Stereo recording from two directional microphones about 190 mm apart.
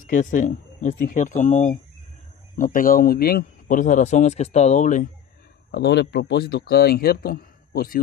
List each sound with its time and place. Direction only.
0.0 s a man's voice: 45° left (ahead or behind)
5.7 s speech: 60° left (ahead or behind)